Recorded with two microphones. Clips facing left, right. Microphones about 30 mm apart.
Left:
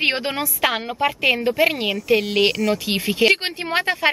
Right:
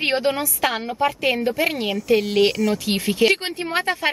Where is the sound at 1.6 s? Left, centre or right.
Centre.